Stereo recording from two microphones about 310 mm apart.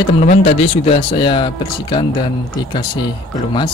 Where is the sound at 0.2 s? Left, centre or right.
Centre.